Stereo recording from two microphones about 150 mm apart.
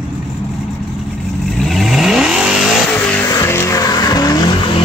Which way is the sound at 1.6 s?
Centre (ahead or behind).